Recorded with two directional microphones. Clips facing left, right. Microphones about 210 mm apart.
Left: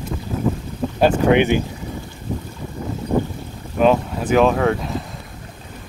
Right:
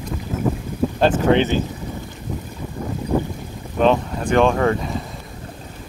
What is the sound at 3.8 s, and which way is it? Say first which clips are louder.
Speech: left 1 dB; 5° left (ahead or behind).